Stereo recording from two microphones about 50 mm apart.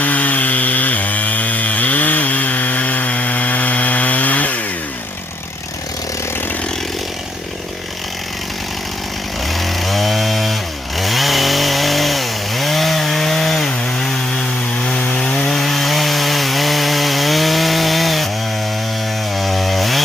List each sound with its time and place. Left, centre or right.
0.0 s chainsaw: left
9.5 s chainsaw: centre
14.8 s wood: left
15.5 s chainsaw: centre
19.3 s chainsaw: centre